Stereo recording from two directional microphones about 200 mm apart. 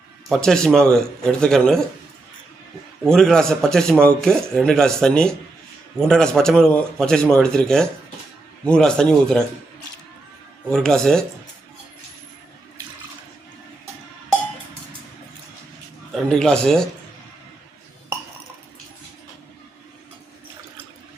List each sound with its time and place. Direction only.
0.3 s a man's voice: centre (ahead or behind)
3.0 s a man's voice: centre (ahead or behind)
10.7 s a man's voice: 5° left (ahead or behind)
16.1 s a man's voice: 5° left (ahead or behind)